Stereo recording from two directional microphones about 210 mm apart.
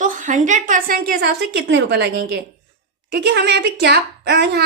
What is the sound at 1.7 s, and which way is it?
A woman's voice, 55° right (ahead or behind).